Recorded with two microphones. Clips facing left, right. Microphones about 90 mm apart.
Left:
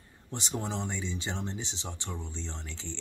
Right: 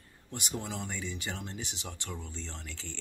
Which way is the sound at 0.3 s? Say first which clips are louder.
Left 3 dB; 25° left (ahead or behind).